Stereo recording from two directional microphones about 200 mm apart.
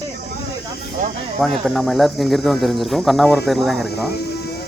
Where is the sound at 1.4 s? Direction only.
Centre (ahead or behind).